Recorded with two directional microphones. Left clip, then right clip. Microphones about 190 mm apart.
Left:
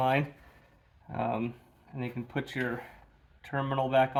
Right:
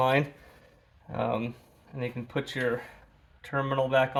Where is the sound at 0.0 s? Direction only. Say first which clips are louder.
Right 3 dB; 25° right (ahead or behind).